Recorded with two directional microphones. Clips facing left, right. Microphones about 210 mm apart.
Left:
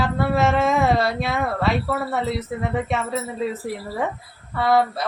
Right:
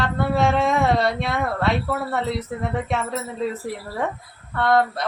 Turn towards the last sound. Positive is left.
turn(degrees=5)  # may be behind; listen again after turning